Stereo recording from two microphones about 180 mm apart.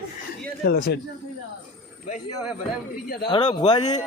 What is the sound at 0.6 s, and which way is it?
Speech, 60° left (ahead or behind).